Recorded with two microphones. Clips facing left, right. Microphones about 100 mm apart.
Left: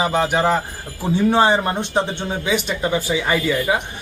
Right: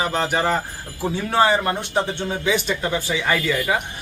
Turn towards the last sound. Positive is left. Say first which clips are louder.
# left 2 dB
turn(degrees=15)  # may be behind; listen again after turning